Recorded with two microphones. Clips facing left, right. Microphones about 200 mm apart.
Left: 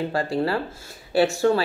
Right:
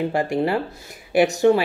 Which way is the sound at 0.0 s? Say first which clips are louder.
Right 3 dB; 20° right (ahead or behind).